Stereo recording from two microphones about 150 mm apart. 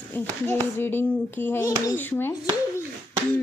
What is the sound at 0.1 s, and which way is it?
A child's voice, 15° left (ahead or behind).